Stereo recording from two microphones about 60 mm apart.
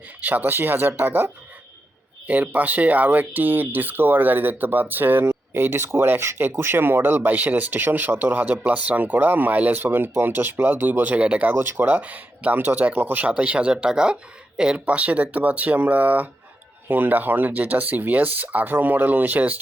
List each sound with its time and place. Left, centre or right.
0.2 s speech: right
2.2 s speech: right
11.5 s speech: right
13.3 s speech: centre
14.8 s speech: right